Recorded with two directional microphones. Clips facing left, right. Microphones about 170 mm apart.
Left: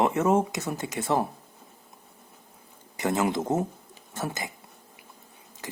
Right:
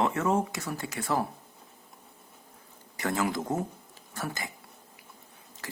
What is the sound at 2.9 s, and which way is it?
Speech, 20° left (ahead or behind).